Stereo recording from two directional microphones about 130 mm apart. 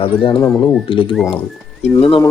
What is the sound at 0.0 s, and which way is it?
Speech, 45° left (ahead or behind).